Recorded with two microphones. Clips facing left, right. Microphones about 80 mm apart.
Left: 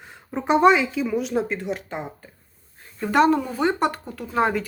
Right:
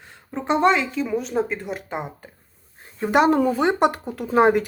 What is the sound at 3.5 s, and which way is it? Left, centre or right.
Speech, centre.